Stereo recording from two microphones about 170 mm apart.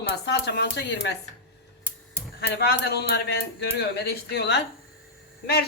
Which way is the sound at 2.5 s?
75° left (ahead or behind).